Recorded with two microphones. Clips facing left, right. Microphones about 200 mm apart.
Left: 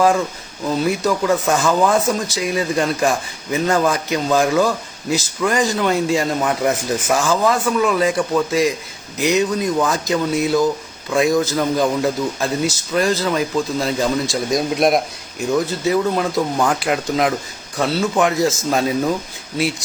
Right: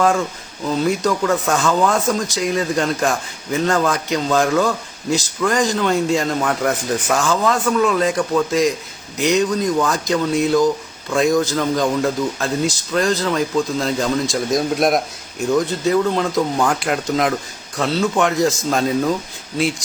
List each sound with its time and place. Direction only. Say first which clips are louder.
0.0 s a man's voice: left 1 dB; centre (ahead or behind)
1.8 s speech: left 1 dB; 15° left (ahead or behind)
2.3 s a man's voice: even; centre (ahead or behind)
3.7 s speech: left 1 dB; 15° left (ahead or behind)
4.4 s a man's voice: left 1 dB; centre (ahead or behind)
11.5 s speech: left 1 dB; 15° left (ahead or behind)
12.9 s a man's voice: left 1 dB; 5° left (ahead or behind)